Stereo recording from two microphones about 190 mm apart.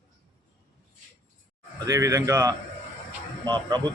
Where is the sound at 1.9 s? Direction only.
15° right (ahead or behind).